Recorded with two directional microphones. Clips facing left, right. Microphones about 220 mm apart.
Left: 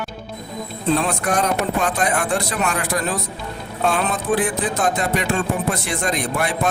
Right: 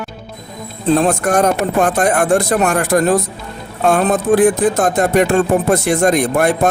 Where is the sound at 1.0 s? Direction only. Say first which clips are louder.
Right 7 dB; 45° right (ahead or behind).